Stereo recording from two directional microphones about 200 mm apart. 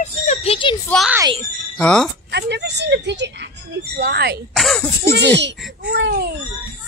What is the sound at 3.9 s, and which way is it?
Speech, 55° right (ahead or behind).